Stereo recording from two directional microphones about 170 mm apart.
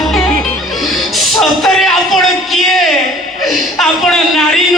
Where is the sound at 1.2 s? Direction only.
Centre (ahead or behind).